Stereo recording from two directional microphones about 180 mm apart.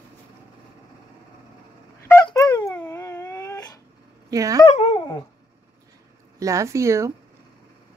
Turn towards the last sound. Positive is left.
turn(degrees=-15)  # may be behind; listen again after turning